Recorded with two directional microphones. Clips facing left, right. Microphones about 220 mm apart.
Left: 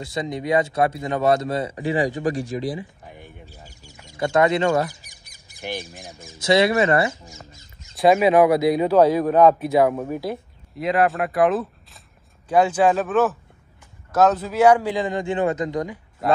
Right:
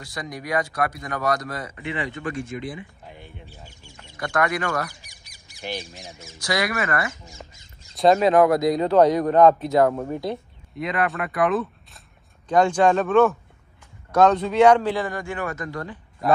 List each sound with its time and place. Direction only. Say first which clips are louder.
0.0 s speech: left 7 dB; 25° left (ahead or behind)
3.1 s a sound: left 1 dB; 15° left (ahead or behind)
4.2 s speech: left 6 dB; 25° left (ahead or behind)
5.7 s speech: left 1 dB; 50° left (ahead or behind)
6.1 s speech: left 8 dB; 25° left (ahead or behind)
7.9 s a man's voice: left 1 dB; 5° left (ahead or behind)